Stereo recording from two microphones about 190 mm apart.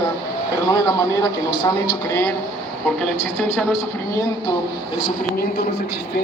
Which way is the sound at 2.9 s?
5° left (ahead or behind).